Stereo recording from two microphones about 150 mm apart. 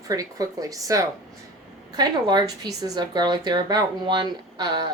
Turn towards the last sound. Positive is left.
turn(degrees=-30)  # may be behind; listen again after turning